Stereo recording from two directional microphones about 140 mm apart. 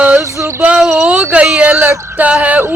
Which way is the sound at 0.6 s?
10° right (ahead or behind).